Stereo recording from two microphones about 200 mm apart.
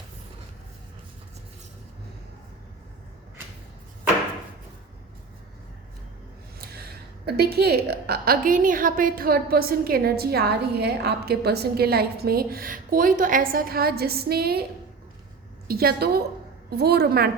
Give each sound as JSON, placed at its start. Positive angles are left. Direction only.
{"t": 7.3, "sound": "a woman's voice", "side_deg": -50}
{"t": 15.6, "sound": "a woman's voice", "side_deg": -50}